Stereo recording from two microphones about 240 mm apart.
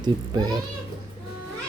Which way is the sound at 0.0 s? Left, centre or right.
Centre.